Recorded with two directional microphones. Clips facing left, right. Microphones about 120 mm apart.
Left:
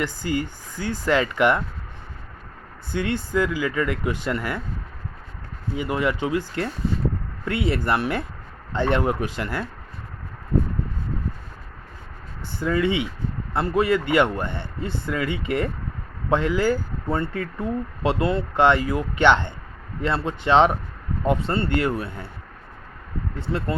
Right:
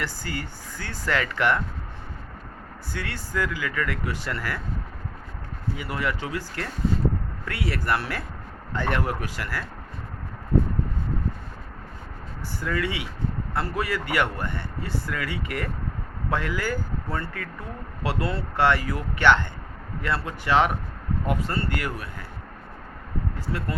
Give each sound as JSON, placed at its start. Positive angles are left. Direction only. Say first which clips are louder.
{"t": 0.0, "sound": "speech", "louder": "left 7 dB", "side_deg": 15}
{"t": 2.9, "sound": "a man's voice", "louder": "left 8 dB", "side_deg": 20}
{"t": 5.7, "sound": "a man's voice", "louder": "left 6 dB", "side_deg": 20}
{"t": 12.5, "sound": "a man's voice", "louder": "left 6 dB", "side_deg": 25}
{"t": 23.4, "sound": "a man's voice", "louder": "left 6 dB", "side_deg": 25}